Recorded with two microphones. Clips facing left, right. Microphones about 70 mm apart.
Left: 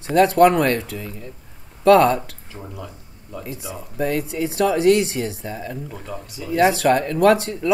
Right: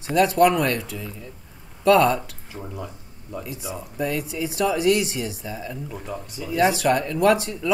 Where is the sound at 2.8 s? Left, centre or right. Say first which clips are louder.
Right 1 dB; centre.